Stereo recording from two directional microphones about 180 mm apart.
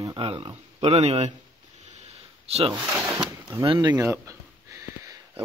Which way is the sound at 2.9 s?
10° right (ahead or behind).